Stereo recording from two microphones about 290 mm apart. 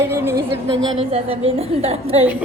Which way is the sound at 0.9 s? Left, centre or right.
Centre.